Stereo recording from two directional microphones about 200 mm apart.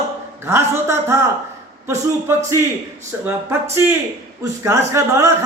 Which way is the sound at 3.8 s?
10° right (ahead or behind).